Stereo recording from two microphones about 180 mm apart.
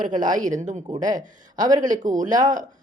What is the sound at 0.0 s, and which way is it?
Speech, 45° right (ahead or behind).